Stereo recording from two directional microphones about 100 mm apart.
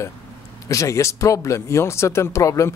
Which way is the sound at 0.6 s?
30° left (ahead or behind).